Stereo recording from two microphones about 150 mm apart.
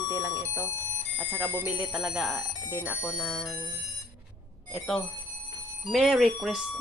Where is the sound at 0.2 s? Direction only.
20° right (ahead or behind).